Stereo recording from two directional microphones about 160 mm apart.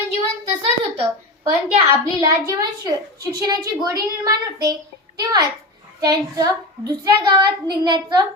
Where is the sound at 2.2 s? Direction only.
20° right (ahead or behind).